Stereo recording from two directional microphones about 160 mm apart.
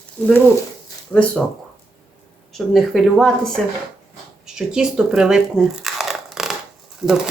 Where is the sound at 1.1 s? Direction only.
5° left (ahead or behind).